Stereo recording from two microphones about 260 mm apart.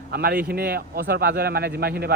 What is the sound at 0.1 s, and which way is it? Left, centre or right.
Speech, right.